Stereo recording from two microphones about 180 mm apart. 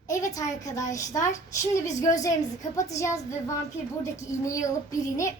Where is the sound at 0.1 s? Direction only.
20° left (ahead or behind).